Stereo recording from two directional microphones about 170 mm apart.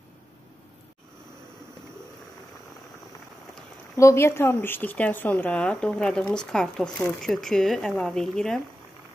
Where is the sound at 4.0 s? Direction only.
15° left (ahead or behind).